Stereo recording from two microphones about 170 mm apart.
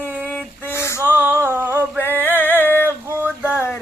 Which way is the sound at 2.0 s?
10° left (ahead or behind).